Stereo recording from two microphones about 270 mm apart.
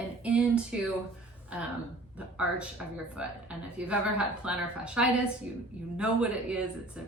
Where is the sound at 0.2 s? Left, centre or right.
Centre.